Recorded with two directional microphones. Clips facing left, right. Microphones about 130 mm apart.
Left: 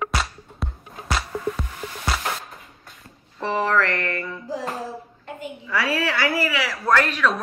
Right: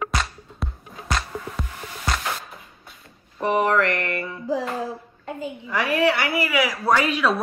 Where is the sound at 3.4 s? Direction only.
20° right (ahead or behind).